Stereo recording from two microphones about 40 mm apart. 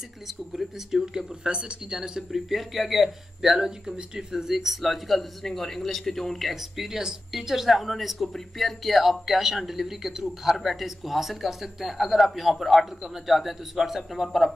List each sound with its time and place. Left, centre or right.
0.5 s speech: centre
1.0 s speech: centre
2.3 s speech: centre
3.6 s speech: centre
6.5 s speech: centre